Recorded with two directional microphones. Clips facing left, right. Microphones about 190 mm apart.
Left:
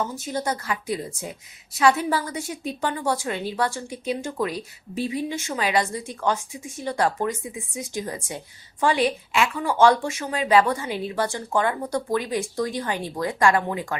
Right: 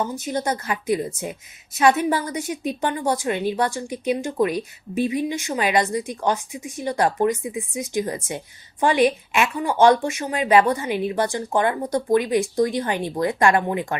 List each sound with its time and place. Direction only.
0.0 s a woman's voice: 20° right (ahead or behind)